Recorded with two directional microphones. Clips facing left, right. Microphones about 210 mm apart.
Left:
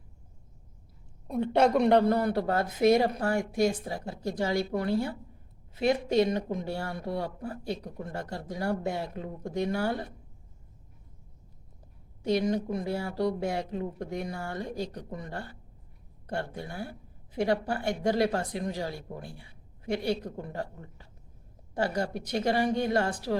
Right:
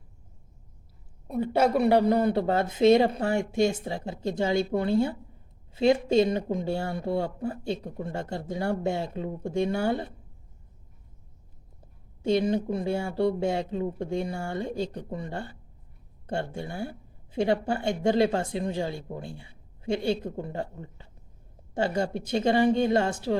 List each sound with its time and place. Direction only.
1.3 s a man's voice: 5° right (ahead or behind)
2.1 s speech: 20° right (ahead or behind)
12.2 s speech: 25° right (ahead or behind)